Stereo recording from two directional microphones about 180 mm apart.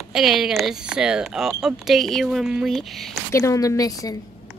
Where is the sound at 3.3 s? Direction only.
15° left (ahead or behind).